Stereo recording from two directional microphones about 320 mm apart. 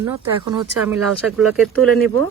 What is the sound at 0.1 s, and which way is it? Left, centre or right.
Speech, centre.